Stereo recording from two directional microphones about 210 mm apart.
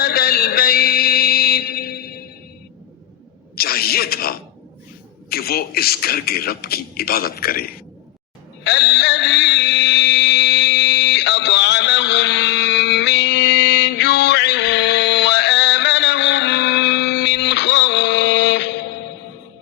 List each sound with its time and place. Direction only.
0.0 s mantra: 45° left (ahead or behind)
3.5 s a sound: 45° left (ahead or behind)
8.6 s mantra: 55° left (ahead or behind)